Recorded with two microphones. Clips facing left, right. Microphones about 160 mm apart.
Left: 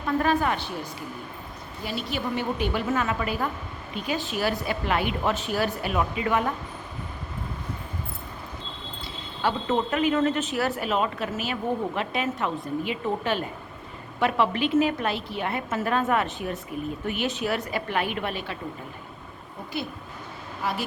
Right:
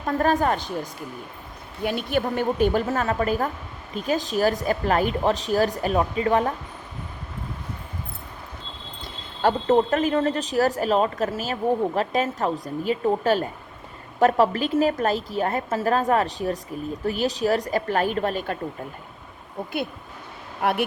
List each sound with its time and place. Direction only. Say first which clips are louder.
0.0 s speech: right 2 dB; 40° right (ahead or behind)
1.8 s a woman's voice: right 6 dB; 55° right (ahead or behind); by 6.5 s 35° right (ahead or behind)
9.4 s a woman's voice: right 6 dB; 45° right (ahead or behind)
20.6 s speech: right 7 dB; 60° right (ahead or behind)